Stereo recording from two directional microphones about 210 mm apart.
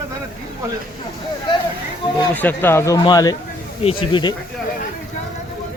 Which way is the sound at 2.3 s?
10° left (ahead or behind).